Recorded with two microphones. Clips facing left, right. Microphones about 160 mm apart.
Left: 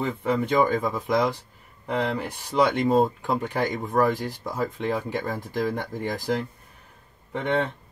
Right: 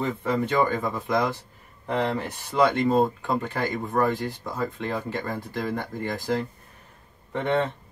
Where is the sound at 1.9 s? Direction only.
10° left (ahead or behind).